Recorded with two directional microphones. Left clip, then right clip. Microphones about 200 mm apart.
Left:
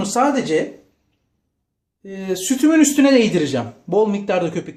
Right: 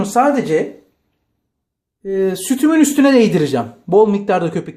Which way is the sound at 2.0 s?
35° right (ahead or behind).